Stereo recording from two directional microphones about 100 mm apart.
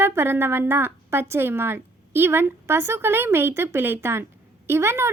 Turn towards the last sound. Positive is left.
turn(degrees=-25)  # may be behind; listen again after turning